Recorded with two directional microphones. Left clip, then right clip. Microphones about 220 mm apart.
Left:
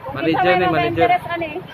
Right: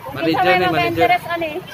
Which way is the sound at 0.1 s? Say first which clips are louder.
Even; centre (ahead or behind).